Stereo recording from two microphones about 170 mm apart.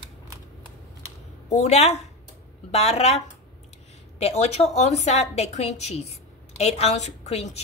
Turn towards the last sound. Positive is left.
turn(degrees=40)  # may be behind; listen again after turning